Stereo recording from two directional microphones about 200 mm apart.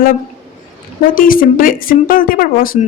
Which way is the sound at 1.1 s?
45° left (ahead or behind).